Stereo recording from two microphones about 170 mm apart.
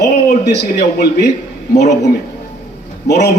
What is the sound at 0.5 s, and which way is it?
Speech, 70° left (ahead or behind).